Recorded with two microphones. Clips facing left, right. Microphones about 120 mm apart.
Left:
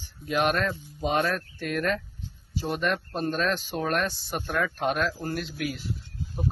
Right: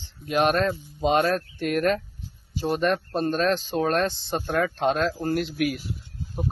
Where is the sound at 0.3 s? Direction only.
25° right (ahead or behind).